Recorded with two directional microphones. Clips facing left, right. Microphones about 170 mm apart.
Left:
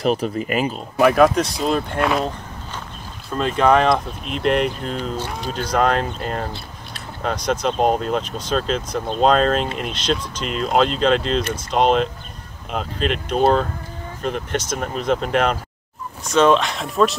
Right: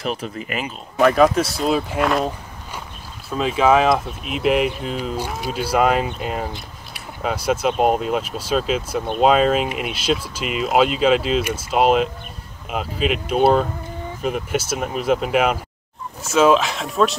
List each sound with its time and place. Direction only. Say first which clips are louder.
0.0 s speech: left 6 dB; 40° left (ahead or behind)
0.9 s speech: even; centre (ahead or behind)